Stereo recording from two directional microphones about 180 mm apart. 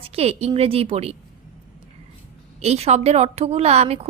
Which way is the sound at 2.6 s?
35° right (ahead or behind).